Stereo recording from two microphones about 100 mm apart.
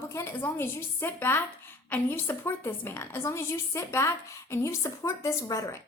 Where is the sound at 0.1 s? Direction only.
25° left (ahead or behind).